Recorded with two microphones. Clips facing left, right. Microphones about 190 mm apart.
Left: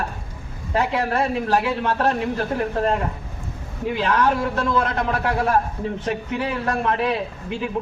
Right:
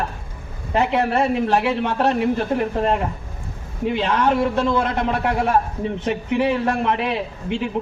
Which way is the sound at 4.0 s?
25° right (ahead or behind).